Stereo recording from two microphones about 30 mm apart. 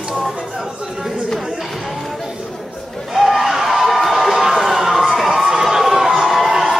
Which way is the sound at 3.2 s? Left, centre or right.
Centre.